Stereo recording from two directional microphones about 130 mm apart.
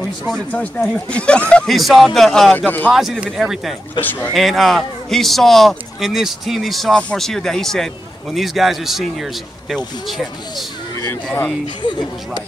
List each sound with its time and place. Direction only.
0.5 s a man's voice: 10° left (ahead or behind)
2.5 s speech: 15° left (ahead or behind)
2.9 s a man's voice: centre (ahead or behind)
4.0 s speech: 15° left (ahead or behind)
4.3 s a man's voice: centre (ahead or behind)
11.8 s speech: 35° left (ahead or behind)